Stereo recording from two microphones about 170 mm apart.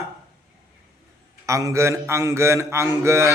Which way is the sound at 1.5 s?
20° right (ahead or behind).